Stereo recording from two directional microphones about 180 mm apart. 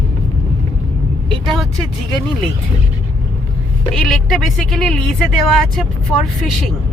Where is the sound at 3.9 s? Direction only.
Centre (ahead or behind).